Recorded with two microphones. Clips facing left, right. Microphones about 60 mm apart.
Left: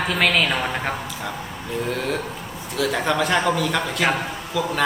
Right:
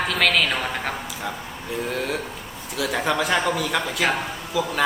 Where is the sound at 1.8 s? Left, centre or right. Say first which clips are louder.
Left 2 dB; centre.